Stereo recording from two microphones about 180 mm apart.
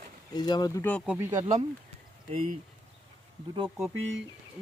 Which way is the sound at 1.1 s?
10° right (ahead or behind).